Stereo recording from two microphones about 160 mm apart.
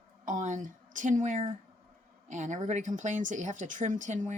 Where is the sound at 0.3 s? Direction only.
50° right (ahead or behind).